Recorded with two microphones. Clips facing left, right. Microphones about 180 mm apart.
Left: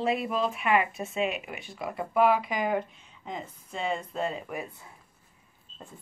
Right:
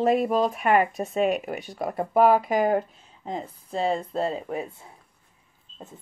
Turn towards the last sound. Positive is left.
turn(degrees=-25)  # may be behind; listen again after turning